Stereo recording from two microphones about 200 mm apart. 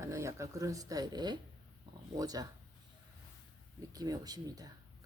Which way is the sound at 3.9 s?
20° right (ahead or behind).